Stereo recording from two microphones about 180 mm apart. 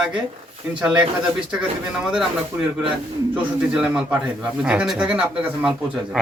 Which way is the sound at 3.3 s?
5° right (ahead or behind).